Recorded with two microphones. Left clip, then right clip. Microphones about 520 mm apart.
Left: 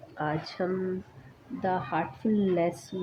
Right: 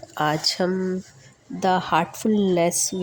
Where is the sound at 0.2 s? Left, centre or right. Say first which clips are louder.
Right 9 dB; centre.